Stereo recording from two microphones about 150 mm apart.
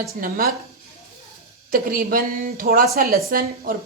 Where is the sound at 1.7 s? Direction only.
70° right (ahead or behind).